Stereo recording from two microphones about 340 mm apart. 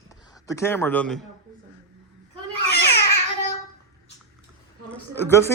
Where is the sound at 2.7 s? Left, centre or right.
Left.